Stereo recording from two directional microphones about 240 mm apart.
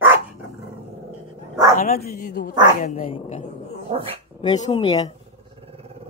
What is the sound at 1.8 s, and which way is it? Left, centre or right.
Speech, left.